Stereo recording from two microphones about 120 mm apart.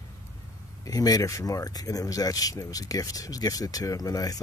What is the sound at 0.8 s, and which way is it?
Speech, 30° left (ahead or behind).